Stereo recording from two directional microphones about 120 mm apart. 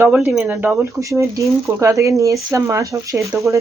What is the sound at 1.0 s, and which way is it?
Speech, 25° right (ahead or behind).